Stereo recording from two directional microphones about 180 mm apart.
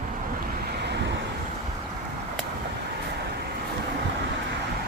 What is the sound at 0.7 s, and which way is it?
Waves, 70° right (ahead or behind).